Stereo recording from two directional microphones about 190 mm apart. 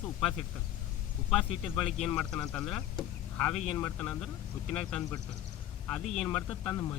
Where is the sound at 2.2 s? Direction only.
5° left (ahead or behind).